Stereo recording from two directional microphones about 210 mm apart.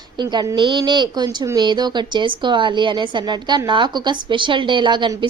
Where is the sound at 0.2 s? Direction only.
20° right (ahead or behind).